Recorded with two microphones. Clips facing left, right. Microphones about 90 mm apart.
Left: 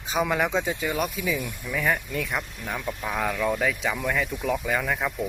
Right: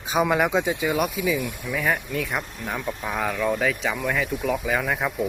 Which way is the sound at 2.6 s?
30° right (ahead or behind).